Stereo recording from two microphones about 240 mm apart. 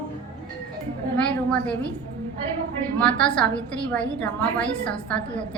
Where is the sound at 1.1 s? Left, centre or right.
Centre.